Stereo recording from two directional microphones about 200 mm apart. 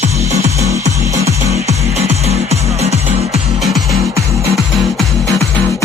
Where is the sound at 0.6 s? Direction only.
15° right (ahead or behind).